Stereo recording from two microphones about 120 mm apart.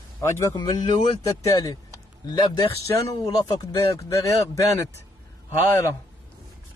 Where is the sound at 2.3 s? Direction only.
40° left (ahead or behind).